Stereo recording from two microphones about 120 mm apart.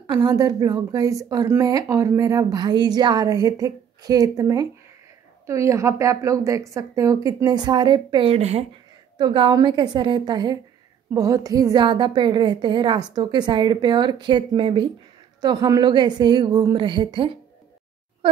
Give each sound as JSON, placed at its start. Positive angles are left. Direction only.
{"t": 0.0, "sound": "a woman's voice", "side_deg": -35}
{"t": 8.3, "sound": "speech", "side_deg": -60}
{"t": 9.2, "sound": "a woman's voice", "side_deg": -40}